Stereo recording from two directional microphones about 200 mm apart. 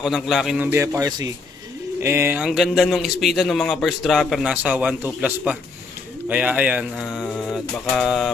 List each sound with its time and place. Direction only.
0.0 s a man's voice: centre (ahead or behind)
0.7 s a man's voice: 15° right (ahead or behind); by 8.3 s centre (ahead or behind)